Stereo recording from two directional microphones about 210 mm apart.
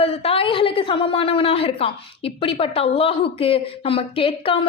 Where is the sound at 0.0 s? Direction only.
25° left (ahead or behind).